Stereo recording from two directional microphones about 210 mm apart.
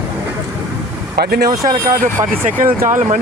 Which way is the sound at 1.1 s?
50° right (ahead or behind).